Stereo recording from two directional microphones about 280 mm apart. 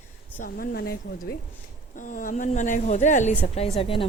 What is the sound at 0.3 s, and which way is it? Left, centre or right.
A woman's voice, left.